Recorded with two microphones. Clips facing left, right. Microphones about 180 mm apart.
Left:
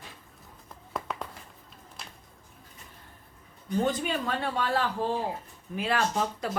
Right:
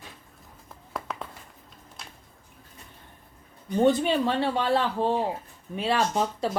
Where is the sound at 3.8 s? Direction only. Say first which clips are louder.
Right 8 dB; 30° right (ahead or behind).